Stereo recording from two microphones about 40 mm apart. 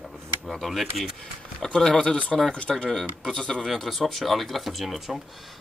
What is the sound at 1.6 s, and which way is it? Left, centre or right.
Speech, centre.